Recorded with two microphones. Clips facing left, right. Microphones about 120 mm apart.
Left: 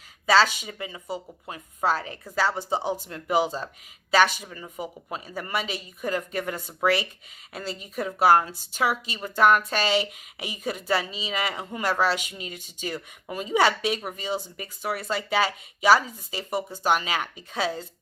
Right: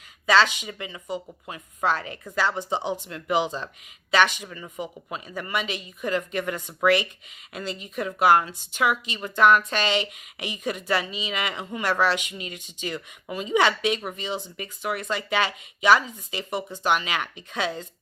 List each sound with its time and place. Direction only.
0.3 s a woman's voice: 40° left (ahead or behind)